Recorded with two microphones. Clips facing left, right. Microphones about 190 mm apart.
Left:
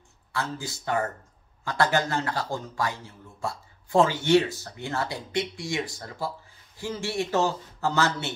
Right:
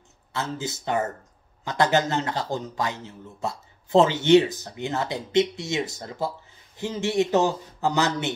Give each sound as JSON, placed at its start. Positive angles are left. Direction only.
{"t": 0.3, "sound": "a man's voice", "side_deg": -20}